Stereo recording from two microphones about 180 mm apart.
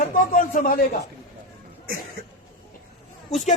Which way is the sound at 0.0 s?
50° left (ahead or behind).